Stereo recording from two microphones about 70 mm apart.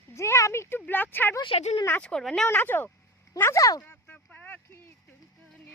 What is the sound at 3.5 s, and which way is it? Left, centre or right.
Speech, left.